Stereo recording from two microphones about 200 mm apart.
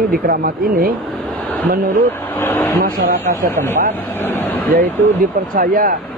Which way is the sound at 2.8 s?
50° right (ahead or behind).